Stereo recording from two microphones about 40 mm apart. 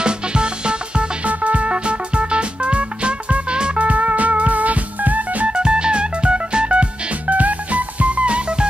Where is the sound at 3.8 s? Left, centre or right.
Right.